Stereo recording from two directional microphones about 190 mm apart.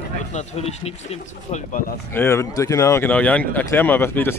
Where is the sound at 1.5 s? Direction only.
45° left (ahead or behind).